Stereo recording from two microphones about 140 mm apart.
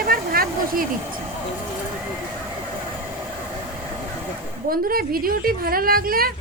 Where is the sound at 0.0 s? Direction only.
90° right.